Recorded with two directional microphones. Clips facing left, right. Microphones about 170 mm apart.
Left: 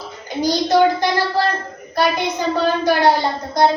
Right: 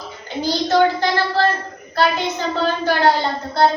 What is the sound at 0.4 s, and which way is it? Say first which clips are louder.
A child's voice: left 2 dB; 15° left (ahead or behind).